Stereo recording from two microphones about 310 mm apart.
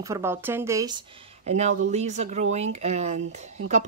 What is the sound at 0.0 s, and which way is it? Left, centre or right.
Speech, centre.